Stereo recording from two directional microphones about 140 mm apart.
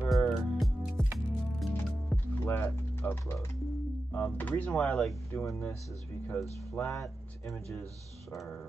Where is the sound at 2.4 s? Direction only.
15° left (ahead or behind).